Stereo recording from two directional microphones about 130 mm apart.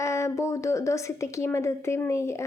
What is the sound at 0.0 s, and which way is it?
A woman's voice, 25° left (ahead or behind).